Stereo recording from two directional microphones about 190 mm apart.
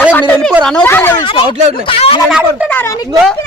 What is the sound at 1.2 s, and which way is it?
Speech, 25° left (ahead or behind).